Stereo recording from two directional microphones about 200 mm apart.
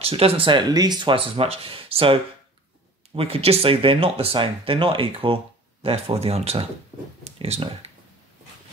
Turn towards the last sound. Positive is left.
turn(degrees=-30)  # may be behind; listen again after turning